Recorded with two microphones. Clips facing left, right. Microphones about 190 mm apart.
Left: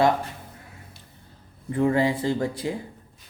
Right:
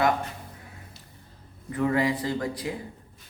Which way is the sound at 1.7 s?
30° left (ahead or behind).